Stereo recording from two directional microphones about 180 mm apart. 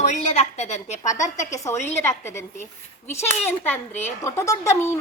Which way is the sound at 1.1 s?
20° left (ahead or behind).